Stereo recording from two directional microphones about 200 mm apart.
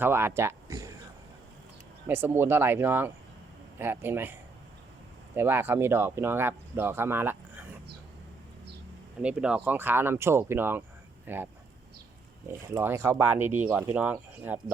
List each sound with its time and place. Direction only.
0.0 s speech: 10° right (ahead or behind)
2.0 s speech: 10° right (ahead or behind)
9.2 s speech: 5° right (ahead or behind)
12.5 s speech: 15° right (ahead or behind)